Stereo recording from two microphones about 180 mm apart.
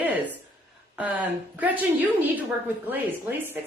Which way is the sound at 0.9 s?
10° right (ahead or behind).